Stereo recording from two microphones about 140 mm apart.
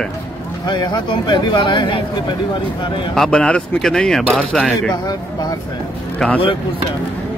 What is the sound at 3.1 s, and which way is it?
Speech, 5° left (ahead or behind).